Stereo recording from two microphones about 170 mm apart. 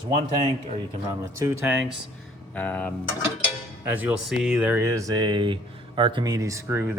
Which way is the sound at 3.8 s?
10° right (ahead or behind).